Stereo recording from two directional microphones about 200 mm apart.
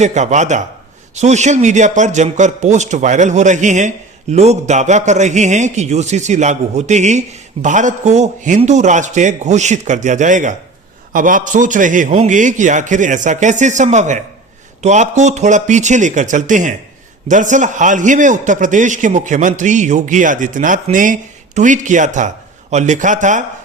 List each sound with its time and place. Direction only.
0.0 s a man's voice: 35° right (ahead or behind)